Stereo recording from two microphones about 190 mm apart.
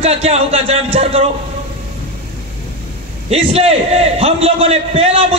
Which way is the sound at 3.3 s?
30° right (ahead or behind).